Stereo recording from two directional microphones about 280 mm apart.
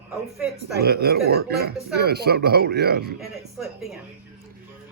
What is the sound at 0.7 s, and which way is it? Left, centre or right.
Speech, right.